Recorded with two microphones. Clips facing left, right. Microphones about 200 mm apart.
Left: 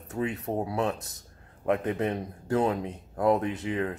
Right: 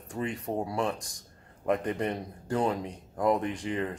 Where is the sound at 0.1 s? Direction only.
5° left (ahead or behind).